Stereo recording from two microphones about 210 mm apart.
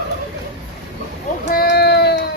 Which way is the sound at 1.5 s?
50° left (ahead or behind).